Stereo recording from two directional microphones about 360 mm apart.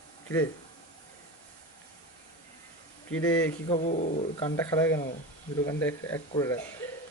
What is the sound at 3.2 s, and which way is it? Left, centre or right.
Speech, centre.